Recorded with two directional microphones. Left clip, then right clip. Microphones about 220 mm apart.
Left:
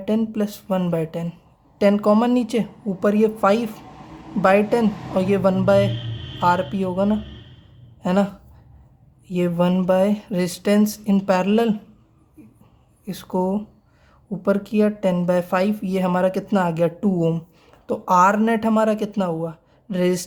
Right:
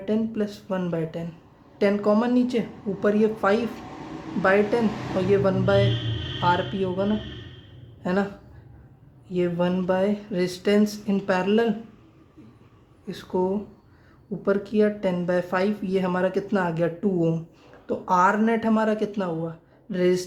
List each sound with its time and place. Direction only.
0.0 s speech: 35° left (ahead or behind)
13.1 s speech: 35° left (ahead or behind)